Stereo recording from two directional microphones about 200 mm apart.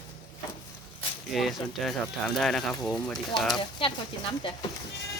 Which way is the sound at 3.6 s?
25° left (ahead or behind).